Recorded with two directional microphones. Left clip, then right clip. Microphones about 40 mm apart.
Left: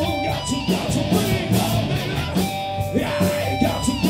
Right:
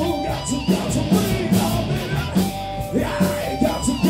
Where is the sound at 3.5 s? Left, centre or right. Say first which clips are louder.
Even; left.